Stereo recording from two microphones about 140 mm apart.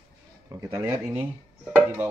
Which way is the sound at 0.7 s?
20° right (ahead or behind).